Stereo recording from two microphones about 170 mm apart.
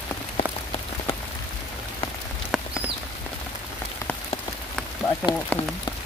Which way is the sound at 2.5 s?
Centre (ahead or behind).